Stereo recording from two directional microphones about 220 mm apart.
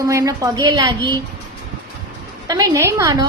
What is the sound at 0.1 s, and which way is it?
A man's voice, 15° right (ahead or behind).